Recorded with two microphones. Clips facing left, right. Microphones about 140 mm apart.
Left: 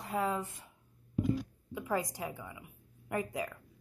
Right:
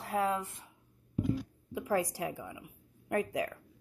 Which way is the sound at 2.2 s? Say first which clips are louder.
Right 3 dB; 70° right (ahead or behind).